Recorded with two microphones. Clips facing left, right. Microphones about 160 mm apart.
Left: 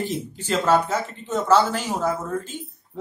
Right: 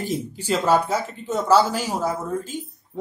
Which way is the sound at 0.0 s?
10° right (ahead or behind).